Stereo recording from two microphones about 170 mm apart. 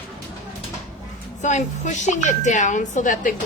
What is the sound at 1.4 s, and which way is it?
Speech, 45° left (ahead or behind).